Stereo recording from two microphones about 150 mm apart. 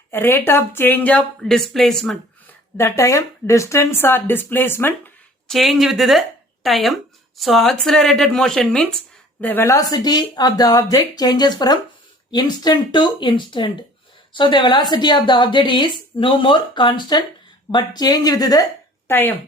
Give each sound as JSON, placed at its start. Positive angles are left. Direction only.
{"t": 0.1, "sound": "speech", "side_deg": 15}
{"t": 2.7, "sound": "speech", "side_deg": 20}
{"t": 5.5, "sound": "a woman's voice", "side_deg": 0}
{"t": 19.0, "sound": "speech", "side_deg": 15}